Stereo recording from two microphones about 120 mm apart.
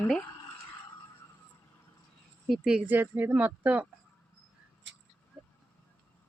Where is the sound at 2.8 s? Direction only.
15° right (ahead or behind).